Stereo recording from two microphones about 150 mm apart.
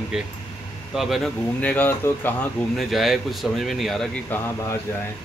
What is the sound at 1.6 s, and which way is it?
Speech, 10° left (ahead or behind).